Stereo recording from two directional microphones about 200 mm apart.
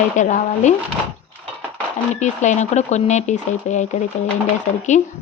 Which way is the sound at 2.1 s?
35° left (ahead or behind).